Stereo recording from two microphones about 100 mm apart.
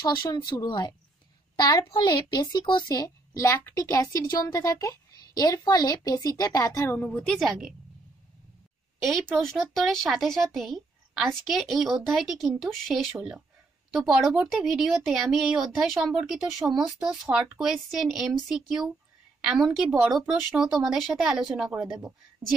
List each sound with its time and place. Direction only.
0.0 s a child's voice: 50° left (ahead or behind)
2.9 s a woman's voice: 35° left (ahead or behind)
7.0 s speech: 15° left (ahead or behind)
7.3 s speech: centre (ahead or behind)
9.0 s speech: 5° left (ahead or behind)